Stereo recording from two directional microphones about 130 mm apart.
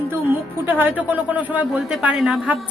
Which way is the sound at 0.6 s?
15° right (ahead or behind).